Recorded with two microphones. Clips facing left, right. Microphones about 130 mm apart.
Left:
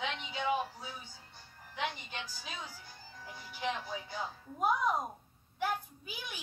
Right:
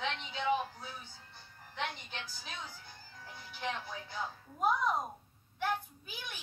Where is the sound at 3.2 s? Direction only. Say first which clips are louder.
Left 2 dB; 10° left (ahead or behind).